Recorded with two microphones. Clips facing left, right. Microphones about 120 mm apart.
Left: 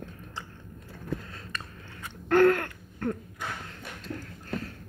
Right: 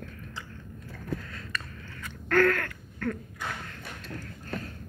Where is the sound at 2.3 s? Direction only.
20° left (ahead or behind).